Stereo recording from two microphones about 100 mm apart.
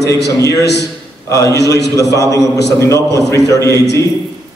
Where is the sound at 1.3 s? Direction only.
35° left (ahead or behind).